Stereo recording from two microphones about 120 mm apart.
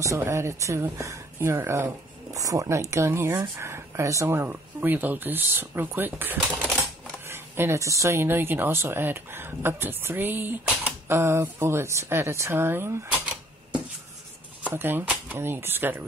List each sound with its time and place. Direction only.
0.0 s speech: 25° right (ahead or behind)
7.2 s a sound: 20° right (ahead or behind)
8.0 s speech: 20° right (ahead or behind)